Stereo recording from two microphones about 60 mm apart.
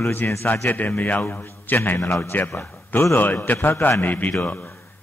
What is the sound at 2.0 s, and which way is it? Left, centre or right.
A man's voice, left.